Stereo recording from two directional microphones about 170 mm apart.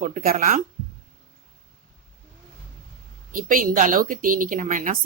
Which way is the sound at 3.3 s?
55° right (ahead or behind).